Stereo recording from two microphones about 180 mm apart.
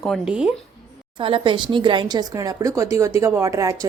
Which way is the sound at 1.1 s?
30° right (ahead or behind).